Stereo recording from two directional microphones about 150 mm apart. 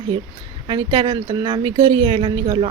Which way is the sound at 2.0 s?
35° right (ahead or behind).